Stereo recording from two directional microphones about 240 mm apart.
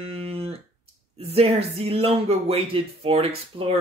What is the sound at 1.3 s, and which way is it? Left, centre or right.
Speech, right.